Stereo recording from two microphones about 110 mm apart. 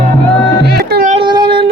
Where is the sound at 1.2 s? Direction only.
45° right (ahead or behind).